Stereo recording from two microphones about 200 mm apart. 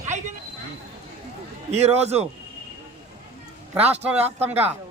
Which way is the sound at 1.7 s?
30° right (ahead or behind).